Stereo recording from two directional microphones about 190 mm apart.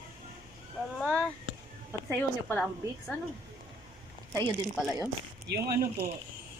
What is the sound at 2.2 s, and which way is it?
Speech, 5° left (ahead or behind).